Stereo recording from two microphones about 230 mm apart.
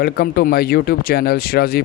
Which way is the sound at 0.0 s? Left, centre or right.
Left.